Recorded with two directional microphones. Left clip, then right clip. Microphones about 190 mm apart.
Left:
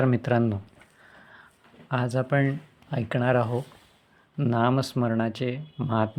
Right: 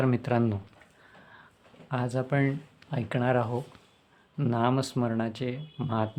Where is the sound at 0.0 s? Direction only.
15° left (ahead or behind).